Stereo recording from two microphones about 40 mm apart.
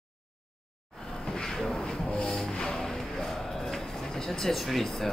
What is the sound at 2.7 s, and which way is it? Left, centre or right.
Music, centre.